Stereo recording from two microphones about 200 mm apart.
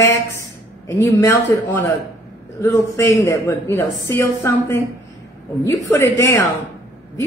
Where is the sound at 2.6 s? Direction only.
15° left (ahead or behind).